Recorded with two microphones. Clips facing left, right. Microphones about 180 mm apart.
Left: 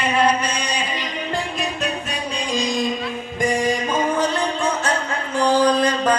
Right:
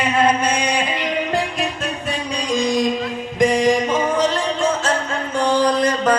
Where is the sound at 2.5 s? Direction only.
65° right (ahead or behind).